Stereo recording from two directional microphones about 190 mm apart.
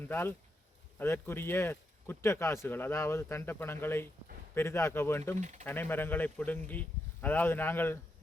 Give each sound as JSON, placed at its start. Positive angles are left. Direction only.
{"t": 0.0, "sound": "speech", "side_deg": 10}
{"t": 5.4, "sound": "speech", "side_deg": -40}
{"t": 5.6, "sound": "speech", "side_deg": 10}